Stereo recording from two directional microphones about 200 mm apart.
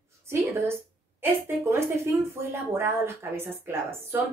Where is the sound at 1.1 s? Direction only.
10° right (ahead or behind).